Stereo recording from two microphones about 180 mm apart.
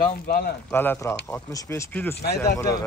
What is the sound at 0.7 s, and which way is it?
Speech, 10° left (ahead or behind).